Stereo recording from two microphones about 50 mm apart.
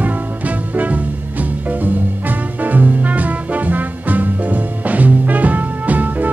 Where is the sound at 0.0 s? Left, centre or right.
Right.